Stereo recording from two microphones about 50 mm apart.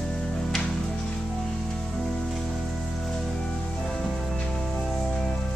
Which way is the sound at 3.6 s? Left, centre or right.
Left.